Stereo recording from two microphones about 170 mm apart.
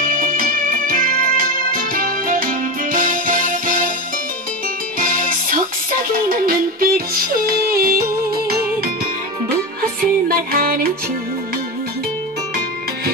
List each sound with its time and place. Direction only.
0.0 s music: 55° right (ahead or behind)
4.9 s music: 55° right (ahead or behind)
9.5 s music: 60° right (ahead or behind)